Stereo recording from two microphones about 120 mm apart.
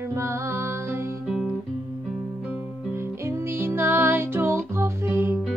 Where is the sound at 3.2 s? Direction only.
20° right (ahead or behind).